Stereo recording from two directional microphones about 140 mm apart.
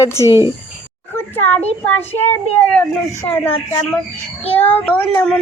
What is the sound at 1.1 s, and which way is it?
A child's voice, 15° left (ahead or behind).